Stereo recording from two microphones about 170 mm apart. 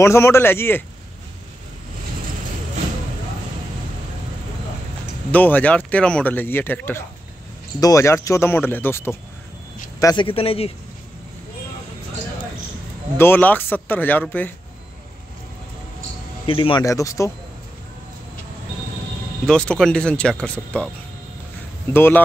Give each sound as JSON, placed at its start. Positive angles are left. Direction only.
{"t": 0.0, "sound": "speech", "side_deg": 15}
{"t": 5.3, "sound": "speech", "side_deg": 10}
{"t": 9.9, "sound": "speech", "side_deg": 25}
{"t": 13.2, "sound": "speech", "side_deg": 10}
{"t": 16.4, "sound": "speech", "side_deg": 30}
{"t": 19.4, "sound": "speech", "side_deg": 5}
{"t": 21.9, "sound": "speech", "side_deg": 15}